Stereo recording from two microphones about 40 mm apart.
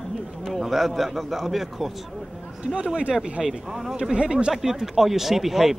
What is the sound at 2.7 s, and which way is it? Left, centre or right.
Speech, right.